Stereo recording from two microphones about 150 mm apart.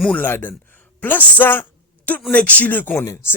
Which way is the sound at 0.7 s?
10° left (ahead or behind).